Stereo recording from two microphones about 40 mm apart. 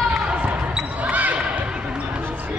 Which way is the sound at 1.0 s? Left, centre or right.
Right.